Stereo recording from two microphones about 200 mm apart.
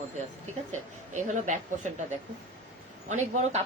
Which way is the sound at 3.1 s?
35° right (ahead or behind).